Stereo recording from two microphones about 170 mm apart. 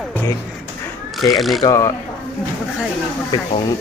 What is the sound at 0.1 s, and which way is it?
Music, 10° left (ahead or behind).